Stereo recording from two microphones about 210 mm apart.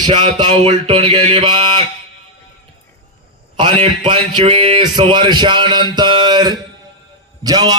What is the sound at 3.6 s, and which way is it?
A man's voice, 25° right (ahead or behind).